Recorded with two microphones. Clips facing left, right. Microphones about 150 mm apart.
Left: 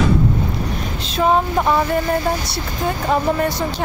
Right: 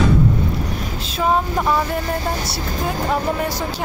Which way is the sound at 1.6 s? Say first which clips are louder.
Left 2 dB; centre (ahead or behind).